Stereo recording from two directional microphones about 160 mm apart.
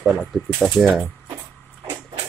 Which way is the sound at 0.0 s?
5° right (ahead or behind).